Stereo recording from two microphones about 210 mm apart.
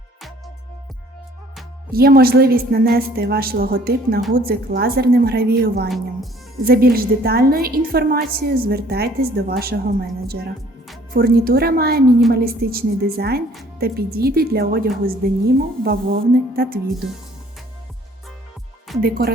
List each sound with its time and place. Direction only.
1.9 s a woman's voice: 45° right (ahead or behind)
19.0 s a woman's voice: 45° right (ahead or behind)